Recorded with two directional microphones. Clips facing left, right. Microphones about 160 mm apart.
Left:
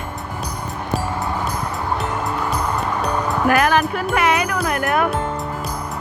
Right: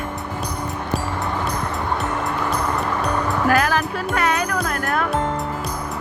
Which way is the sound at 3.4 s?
5° left (ahead or behind).